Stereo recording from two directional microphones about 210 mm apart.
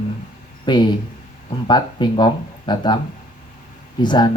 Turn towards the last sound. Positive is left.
turn(degrees=20)  # may be behind; listen again after turning